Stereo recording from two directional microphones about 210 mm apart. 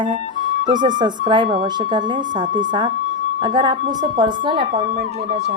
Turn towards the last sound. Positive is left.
turn(degrees=-20)  # may be behind; listen again after turning